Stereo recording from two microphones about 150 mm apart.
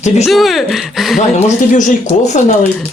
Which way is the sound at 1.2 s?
50° left (ahead or behind).